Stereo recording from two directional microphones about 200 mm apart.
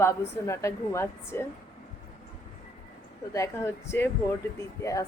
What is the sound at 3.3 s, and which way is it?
A woman's voice, 15° left (ahead or behind).